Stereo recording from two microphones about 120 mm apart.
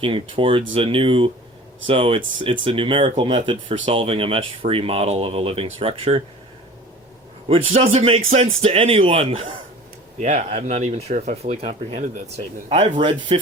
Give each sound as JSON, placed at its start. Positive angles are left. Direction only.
{"t": 0.0, "sound": "speech", "side_deg": -45}
{"t": 7.4, "sound": "a man's voice", "side_deg": -50}
{"t": 10.2, "sound": "speech", "side_deg": -70}
{"t": 12.6, "sound": "a man's voice", "side_deg": -65}
{"t": 13.0, "sound": "speech", "side_deg": -45}